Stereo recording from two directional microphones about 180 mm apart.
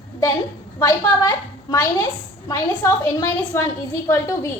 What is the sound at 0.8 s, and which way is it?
A woman's voice, 20° left (ahead or behind).